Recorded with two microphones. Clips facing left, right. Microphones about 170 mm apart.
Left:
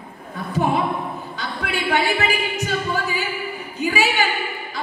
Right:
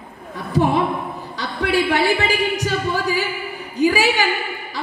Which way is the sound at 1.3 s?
35° right (ahead or behind).